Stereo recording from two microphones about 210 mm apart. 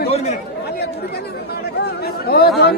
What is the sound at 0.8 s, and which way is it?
Chatter, 50° left (ahead or behind).